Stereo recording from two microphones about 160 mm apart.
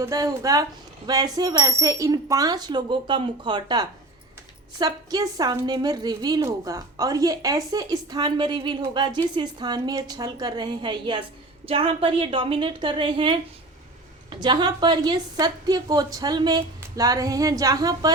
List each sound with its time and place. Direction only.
0.0 s a woman's voice: 20° right (ahead or behind)